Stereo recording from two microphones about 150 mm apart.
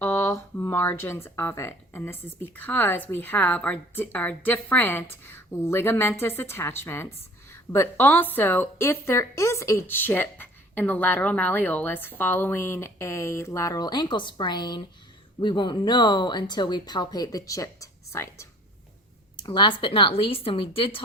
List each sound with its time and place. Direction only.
0.0 s a woman's voice: 15° left (ahead or behind)
19.4 s speech: 30° left (ahead or behind)